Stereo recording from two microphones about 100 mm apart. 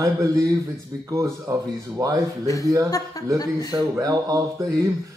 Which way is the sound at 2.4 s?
35° left (ahead or behind).